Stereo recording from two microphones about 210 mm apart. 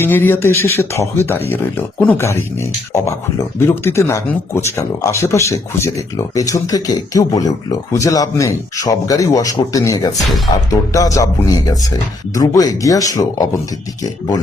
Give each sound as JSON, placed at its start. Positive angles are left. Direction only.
{"t": 0.0, "sound": "speech", "side_deg": 10}